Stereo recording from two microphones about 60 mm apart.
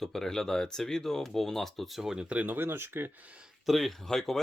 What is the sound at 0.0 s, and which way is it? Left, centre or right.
Speech, centre.